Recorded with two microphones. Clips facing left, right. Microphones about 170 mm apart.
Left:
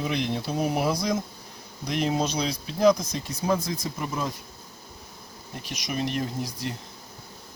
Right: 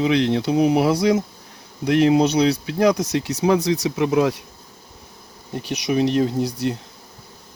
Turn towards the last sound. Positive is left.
turn(degrees=-70)  # may be behind; listen again after turning